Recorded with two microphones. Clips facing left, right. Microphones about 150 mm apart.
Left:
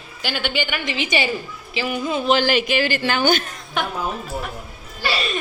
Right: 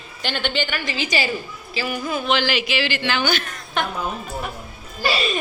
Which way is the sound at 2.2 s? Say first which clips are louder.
Left 4 dB; 45° left (ahead or behind).